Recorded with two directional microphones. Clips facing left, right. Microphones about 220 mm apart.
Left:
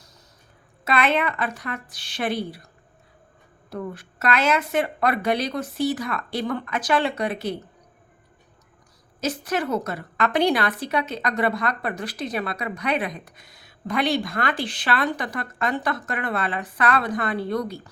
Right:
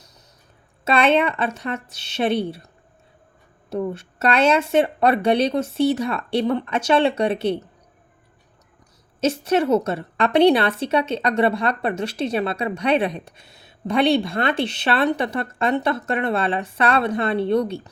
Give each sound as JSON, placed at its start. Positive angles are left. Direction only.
{"t": 0.9, "sound": "a woman's voice", "side_deg": -25}
{"t": 3.7, "sound": "a woman's voice", "side_deg": -25}
{"t": 9.2, "sound": "a woman's voice", "side_deg": -25}